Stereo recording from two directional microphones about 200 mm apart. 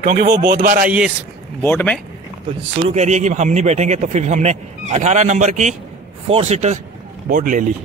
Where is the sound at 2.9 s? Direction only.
35° right (ahead or behind).